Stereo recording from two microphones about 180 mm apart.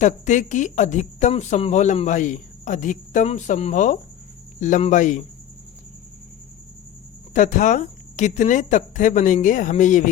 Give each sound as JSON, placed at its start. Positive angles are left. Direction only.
{"t": 0.0, "sound": "speech", "side_deg": 40}
{"t": 7.3, "sound": "speech", "side_deg": 45}